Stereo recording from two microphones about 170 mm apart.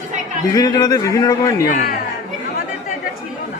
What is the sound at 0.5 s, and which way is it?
Speech, 25° left (ahead or behind).